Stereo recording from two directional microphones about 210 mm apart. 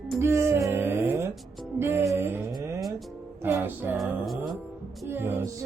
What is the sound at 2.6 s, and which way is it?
Music, 15° right (ahead or behind).